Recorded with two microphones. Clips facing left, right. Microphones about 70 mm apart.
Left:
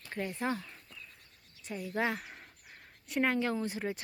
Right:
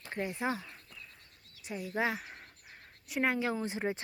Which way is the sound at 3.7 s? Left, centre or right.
Right.